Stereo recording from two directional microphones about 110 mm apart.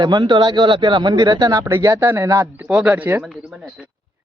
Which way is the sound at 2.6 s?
10° right (ahead or behind).